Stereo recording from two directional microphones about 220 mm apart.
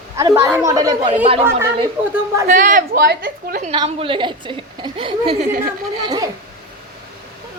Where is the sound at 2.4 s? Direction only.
35° right (ahead or behind).